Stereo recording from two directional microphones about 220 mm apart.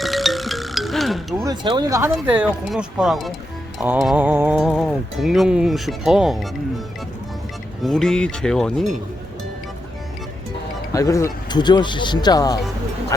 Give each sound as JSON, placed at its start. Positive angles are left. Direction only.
{"t": 0.0, "sound": "music", "side_deg": 0}
{"t": 1.5, "sound": "speech", "side_deg": -20}
{"t": 2.3, "sound": "music", "side_deg": -5}
{"t": 7.8, "sound": "music", "side_deg": 0}
{"t": 10.9, "sound": "speech", "side_deg": 15}